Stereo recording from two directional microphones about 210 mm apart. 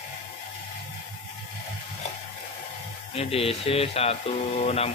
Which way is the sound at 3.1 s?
30° left (ahead or behind).